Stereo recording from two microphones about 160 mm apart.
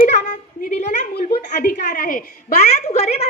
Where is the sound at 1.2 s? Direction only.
75° left (ahead or behind).